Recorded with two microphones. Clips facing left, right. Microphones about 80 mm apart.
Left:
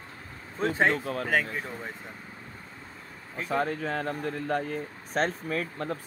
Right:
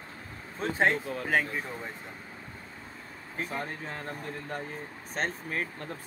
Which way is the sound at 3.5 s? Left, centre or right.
Left.